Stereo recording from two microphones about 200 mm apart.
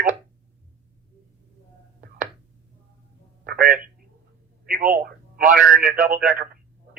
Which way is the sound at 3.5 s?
45° right (ahead or behind).